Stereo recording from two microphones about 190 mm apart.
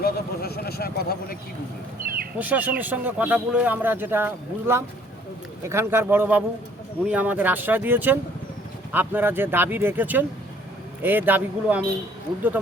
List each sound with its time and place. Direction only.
0.0 s vehicle: 55° left (ahead or behind)
2.4 s speech: 10° right (ahead or behind)